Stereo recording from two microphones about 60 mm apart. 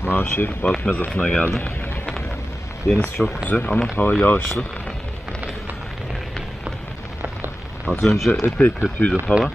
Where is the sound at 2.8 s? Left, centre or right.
Left.